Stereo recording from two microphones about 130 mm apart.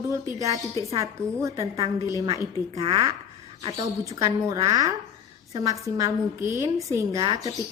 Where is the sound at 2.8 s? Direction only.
45° right (ahead or behind).